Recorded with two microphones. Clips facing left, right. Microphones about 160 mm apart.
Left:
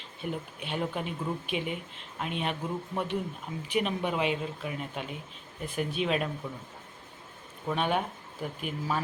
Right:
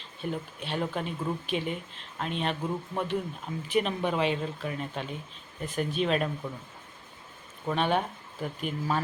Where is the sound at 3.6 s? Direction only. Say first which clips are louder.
Right 2 dB; 10° left (ahead or behind).